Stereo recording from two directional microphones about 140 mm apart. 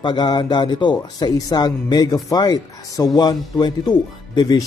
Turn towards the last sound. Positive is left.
turn(degrees=30)  # may be behind; listen again after turning